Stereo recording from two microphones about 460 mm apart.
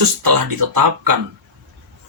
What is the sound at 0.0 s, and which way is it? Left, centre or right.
Speech, right.